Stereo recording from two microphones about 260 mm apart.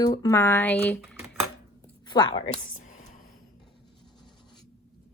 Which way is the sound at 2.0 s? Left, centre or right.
Centre.